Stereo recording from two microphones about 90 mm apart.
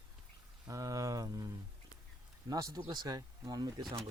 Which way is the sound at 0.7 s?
40° right (ahead or behind).